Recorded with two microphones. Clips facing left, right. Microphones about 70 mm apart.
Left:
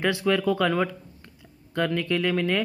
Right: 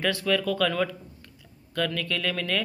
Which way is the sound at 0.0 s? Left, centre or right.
Left.